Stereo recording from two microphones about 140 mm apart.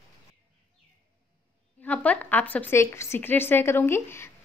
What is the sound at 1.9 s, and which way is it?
Speech, 10° left (ahead or behind).